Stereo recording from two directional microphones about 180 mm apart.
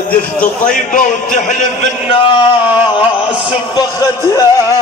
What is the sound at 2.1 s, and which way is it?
Speech, 30° left (ahead or behind).